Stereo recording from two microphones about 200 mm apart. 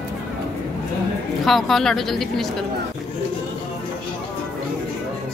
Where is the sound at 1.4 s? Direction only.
Centre (ahead or behind).